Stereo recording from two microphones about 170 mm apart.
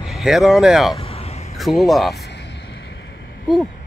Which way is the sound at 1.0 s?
35° left (ahead or behind).